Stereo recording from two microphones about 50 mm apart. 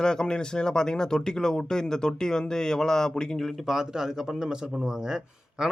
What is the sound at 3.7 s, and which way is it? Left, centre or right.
A man's voice, centre.